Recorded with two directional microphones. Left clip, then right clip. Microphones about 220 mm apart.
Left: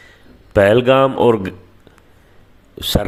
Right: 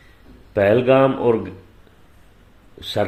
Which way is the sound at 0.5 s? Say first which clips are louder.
Left 3 dB; 35° left (ahead or behind).